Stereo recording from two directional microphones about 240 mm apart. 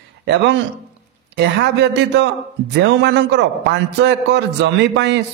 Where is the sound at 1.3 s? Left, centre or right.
Right.